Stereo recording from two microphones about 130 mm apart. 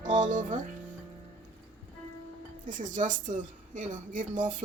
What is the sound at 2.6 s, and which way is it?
A woman's voice, 80° right.